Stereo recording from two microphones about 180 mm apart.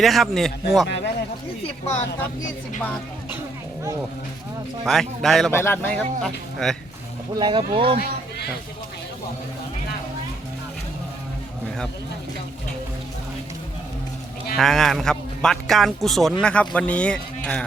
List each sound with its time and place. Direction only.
0.0 s speech: centre (ahead or behind)
0.9 s a man's voice: 70° left (ahead or behind)
4.9 s speech: centre (ahead or behind)
5.5 s speech: 15° left (ahead or behind)
7.3 s speech: 25° right (ahead or behind)
14.5 s speech: centre (ahead or behind)